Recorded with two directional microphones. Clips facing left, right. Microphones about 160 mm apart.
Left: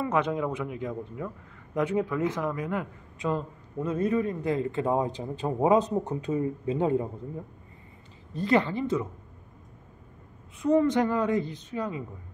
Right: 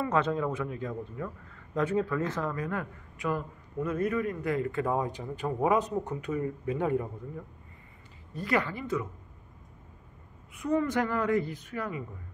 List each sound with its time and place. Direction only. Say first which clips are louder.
0.0 s speech: left 1 dB; 15° left (ahead or behind)
8.3 s speech: left 5 dB; 25° left (ahead or behind)
10.6 s speech: left 5 dB; 25° left (ahead or behind)